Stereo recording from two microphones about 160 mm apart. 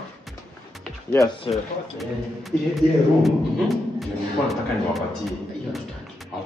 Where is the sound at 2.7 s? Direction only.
Centre (ahead or behind).